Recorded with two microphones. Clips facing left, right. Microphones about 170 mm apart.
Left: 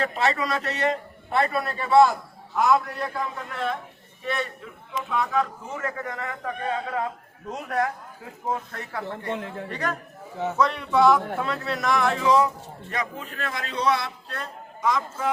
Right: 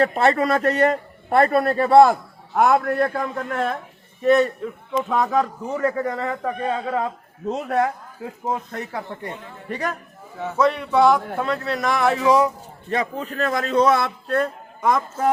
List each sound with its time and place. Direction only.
0.0 s a man's voice: 50° right (ahead or behind); by 9.0 s 20° right (ahead or behind)
9.3 s a man's voice: 90° left
9.6 s a man's voice: 10° right (ahead or behind)
12.9 s a man's voice: 35° right (ahead or behind); by 15.3 s 50° right (ahead or behind)